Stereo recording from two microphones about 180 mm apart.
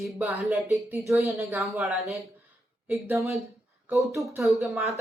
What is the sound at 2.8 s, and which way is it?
Speech, 15° right (ahead or behind).